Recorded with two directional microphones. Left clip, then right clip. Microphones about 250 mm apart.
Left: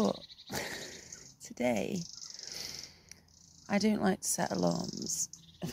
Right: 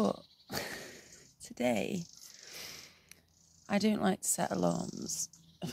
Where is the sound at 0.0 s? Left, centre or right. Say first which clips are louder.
Left 1 dB; centre.